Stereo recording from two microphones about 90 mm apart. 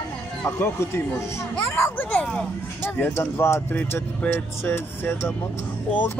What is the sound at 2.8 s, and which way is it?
Speech, 25° left (ahead or behind).